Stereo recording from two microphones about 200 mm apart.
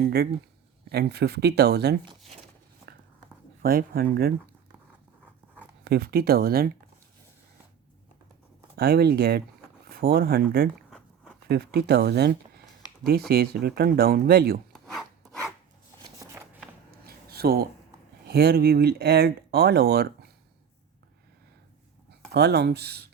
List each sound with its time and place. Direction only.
0.0 s speech: 50° right (ahead or behind)
3.6 s speech: 45° right (ahead or behind)
5.8 s speech: 50° right (ahead or behind)
8.7 s speech: 50° right (ahead or behind)
14.7 s rub: centre (ahead or behind)
17.0 s a sound: 50° right (ahead or behind)
18.3 s speech: 50° right (ahead or behind)
22.3 s speech: 55° right (ahead or behind)